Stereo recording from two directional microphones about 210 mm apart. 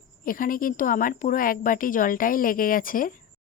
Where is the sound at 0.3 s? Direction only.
40° left (ahead or behind).